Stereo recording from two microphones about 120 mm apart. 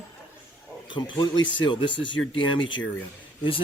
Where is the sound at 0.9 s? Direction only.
40° left (ahead or behind).